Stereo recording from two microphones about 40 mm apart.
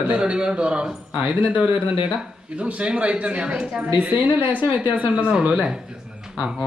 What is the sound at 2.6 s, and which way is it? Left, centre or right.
Speech, right.